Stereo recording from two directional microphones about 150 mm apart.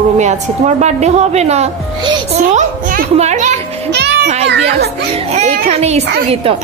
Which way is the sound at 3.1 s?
50° right (ahead or behind).